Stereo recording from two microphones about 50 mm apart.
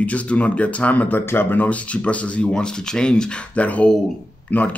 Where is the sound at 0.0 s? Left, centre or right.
Left.